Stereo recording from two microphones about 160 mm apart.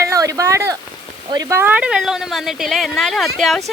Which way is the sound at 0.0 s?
20° right (ahead or behind).